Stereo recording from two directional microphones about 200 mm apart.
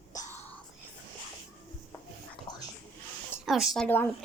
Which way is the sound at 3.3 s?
Centre (ahead or behind).